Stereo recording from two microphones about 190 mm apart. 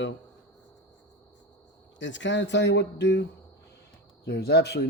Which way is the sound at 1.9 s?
75° left (ahead or behind).